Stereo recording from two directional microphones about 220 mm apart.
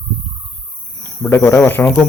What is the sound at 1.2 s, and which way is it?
Speech, 15° left (ahead or behind).